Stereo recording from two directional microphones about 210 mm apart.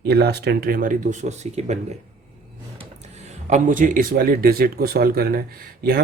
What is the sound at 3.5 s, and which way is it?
Speech, 40° right (ahead or behind).